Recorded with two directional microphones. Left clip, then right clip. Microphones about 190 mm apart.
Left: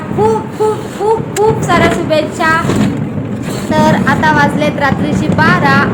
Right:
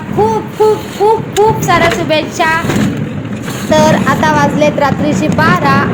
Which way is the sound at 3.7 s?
5° right (ahead or behind).